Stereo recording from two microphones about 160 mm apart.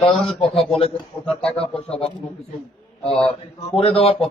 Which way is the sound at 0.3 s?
35° left (ahead or behind).